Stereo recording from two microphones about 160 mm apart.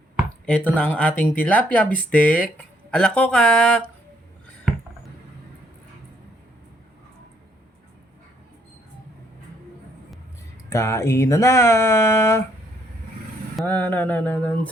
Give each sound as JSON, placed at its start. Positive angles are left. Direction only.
{"t": 0.4, "sound": "speech", "side_deg": 5}
{"t": 4.7, "sound": "a sound", "side_deg": -5}
{"t": 10.7, "sound": "speech", "side_deg": 15}
{"t": 13.6, "sound": "speech", "side_deg": 10}